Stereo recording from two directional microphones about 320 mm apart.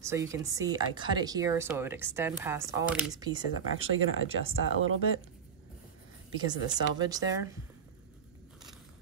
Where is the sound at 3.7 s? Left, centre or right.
Right.